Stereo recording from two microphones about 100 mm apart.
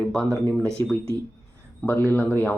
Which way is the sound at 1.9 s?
20° left (ahead or behind).